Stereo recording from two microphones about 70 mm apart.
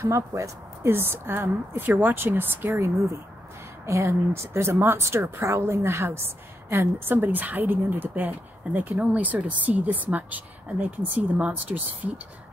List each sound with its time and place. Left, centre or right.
0.0 s speech: right
0.8 s a woman's voice: right
2.7 s a woman's voice: right
7.2 s speech: right